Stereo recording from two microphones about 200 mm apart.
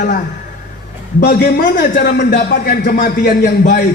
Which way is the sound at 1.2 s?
50° left (ahead or behind).